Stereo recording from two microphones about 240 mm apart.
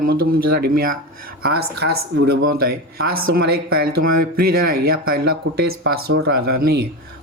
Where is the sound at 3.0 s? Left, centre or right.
Right.